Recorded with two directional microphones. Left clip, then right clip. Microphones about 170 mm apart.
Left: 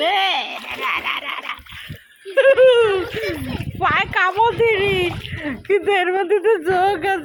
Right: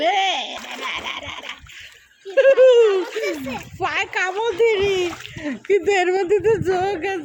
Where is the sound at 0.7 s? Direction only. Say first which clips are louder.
Left 5 dB; 15° right (ahead or behind).